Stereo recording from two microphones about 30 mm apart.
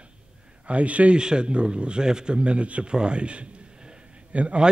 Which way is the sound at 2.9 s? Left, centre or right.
Right.